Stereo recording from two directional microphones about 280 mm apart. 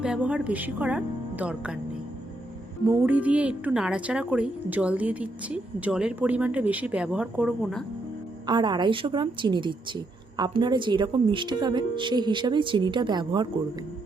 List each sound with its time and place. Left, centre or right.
0.0 s a woman's voice: centre
2.9 s a woman's voice: centre
8.4 s speech: centre